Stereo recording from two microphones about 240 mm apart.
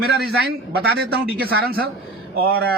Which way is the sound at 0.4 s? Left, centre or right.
Right.